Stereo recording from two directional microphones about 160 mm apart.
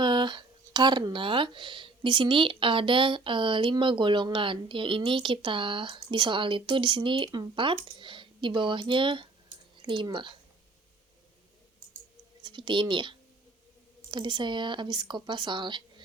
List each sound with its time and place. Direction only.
0.0 s speech: 30° right (ahead or behind)
12.4 s speech: 30° right (ahead or behind)